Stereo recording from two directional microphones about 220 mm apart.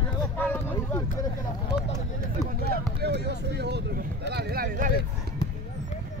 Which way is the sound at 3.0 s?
50° right (ahead or behind).